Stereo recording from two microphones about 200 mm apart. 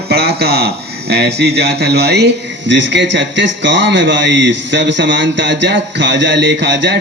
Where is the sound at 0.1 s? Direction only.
55° right (ahead or behind).